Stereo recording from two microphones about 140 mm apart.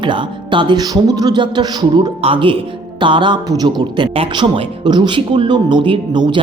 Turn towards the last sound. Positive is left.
turn(degrees=-35)  # may be behind; listen again after turning